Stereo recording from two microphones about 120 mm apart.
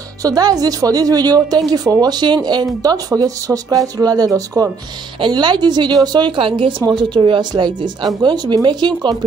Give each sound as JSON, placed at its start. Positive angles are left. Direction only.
{"t": 0.2, "sound": "a woman's voice", "side_deg": -30}